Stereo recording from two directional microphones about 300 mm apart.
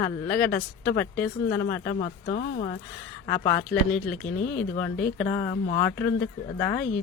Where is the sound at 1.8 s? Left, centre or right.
Left.